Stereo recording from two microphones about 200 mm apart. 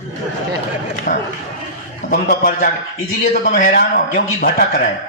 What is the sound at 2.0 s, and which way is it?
A man's voice, 45° left (ahead or behind).